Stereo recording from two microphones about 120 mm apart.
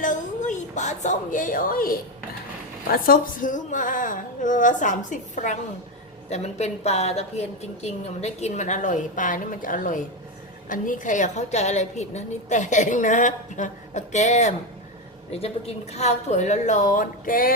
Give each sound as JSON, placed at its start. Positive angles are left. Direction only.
{"t": 0.0, "sound": "a sound", "side_deg": 90}
{"t": 3.4, "sound": "a woman's voice", "side_deg": 90}
{"t": 6.3, "sound": "a woman's voice", "side_deg": 65}
{"t": 15.3, "sound": "a woman's voice", "side_deg": 60}